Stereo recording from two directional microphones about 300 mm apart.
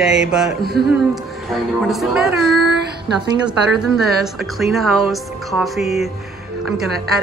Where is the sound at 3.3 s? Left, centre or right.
Centre.